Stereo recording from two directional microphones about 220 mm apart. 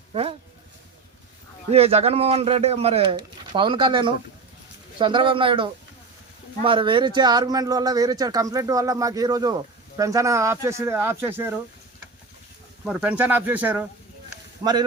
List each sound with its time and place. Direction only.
0.1 s a sound: 25° right (ahead or behind)
1.7 s speech: 30° right (ahead or behind); by 11.5 s 10° right (ahead or behind)
12.8 s speech: 5° right (ahead or behind)
14.6 s speech: 20° right (ahead or behind)